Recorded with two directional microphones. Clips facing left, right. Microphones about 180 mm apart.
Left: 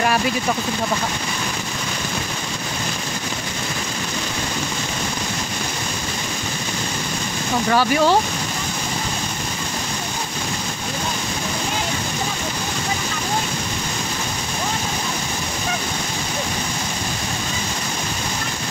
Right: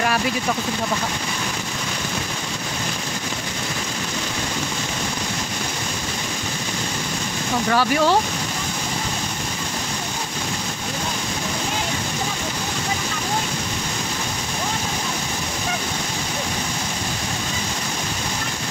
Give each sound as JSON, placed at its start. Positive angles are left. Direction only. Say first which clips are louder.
{"t": 7.7, "sound": "speech", "louder": "left 2 dB", "side_deg": 20}